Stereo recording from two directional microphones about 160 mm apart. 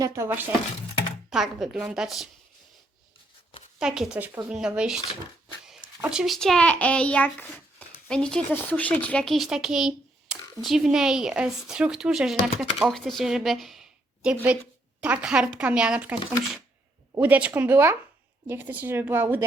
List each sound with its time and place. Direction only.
0.0 s speech: 15° right (ahead or behind)
1.3 s speech: centre (ahead or behind)
3.8 s a child's voice: 5° right (ahead or behind)
17.2 s speech: 10° right (ahead or behind)